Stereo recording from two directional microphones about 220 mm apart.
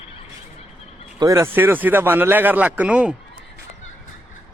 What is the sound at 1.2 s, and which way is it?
Speech, 15° right (ahead or behind).